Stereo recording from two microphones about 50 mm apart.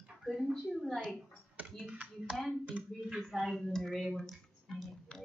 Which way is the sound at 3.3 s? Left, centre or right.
Centre.